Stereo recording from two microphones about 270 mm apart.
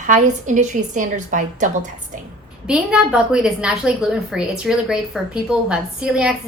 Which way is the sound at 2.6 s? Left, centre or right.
Centre.